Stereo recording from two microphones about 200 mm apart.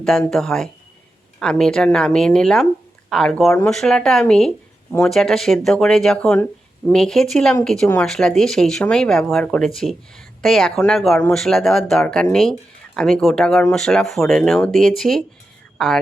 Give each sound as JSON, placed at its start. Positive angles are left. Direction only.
{"t": 0.3, "sound": "speech", "side_deg": 0}